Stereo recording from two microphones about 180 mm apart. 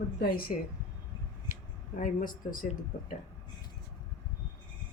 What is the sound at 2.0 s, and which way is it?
Speech, 50° left (ahead or behind).